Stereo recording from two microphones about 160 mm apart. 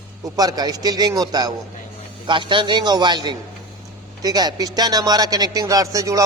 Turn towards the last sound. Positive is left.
turn(degrees=-20)  # may be behind; listen again after turning